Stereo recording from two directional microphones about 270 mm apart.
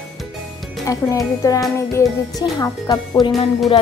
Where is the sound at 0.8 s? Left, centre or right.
Centre.